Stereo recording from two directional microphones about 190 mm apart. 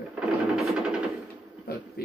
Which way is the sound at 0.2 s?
5° right (ahead or behind).